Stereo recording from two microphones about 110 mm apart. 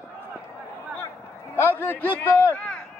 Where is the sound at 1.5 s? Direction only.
20° left (ahead or behind).